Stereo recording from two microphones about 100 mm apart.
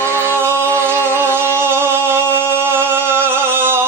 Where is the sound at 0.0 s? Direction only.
25° right (ahead or behind).